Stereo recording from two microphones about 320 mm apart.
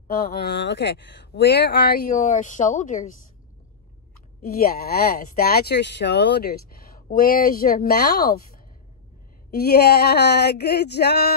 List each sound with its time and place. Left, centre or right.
0.2 s speech: left
4.4 s speech: left
9.5 s a sound: left